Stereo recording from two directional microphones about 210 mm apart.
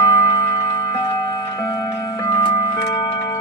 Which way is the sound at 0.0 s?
15° left (ahead or behind).